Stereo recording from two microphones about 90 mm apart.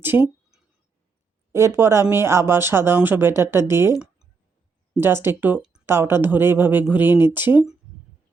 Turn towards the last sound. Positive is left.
turn(degrees=-20)  # may be behind; listen again after turning